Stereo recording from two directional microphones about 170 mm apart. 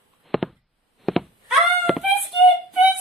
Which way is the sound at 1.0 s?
Centre (ahead or behind).